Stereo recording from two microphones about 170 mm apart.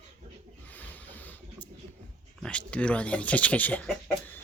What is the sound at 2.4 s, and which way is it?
Speech, 5° left (ahead or behind).